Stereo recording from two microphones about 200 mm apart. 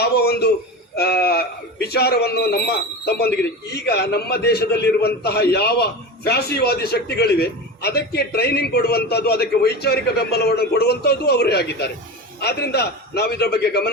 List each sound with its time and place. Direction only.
0.0 s speech: 50° left (ahead or behind)